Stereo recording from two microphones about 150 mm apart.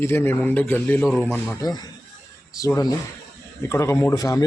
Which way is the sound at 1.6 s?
25° left (ahead or behind).